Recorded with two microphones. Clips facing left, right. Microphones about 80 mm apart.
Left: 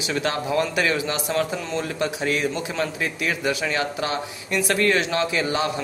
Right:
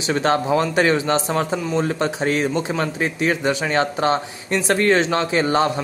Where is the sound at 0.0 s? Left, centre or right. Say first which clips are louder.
Right 6 dB; right.